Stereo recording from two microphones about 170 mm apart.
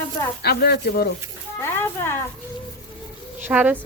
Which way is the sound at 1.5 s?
15° left (ahead or behind).